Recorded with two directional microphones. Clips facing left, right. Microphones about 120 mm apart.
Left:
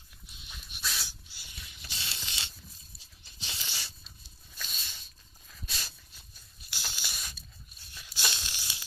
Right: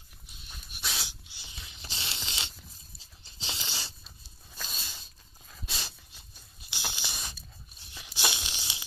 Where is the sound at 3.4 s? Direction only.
30° right (ahead or behind).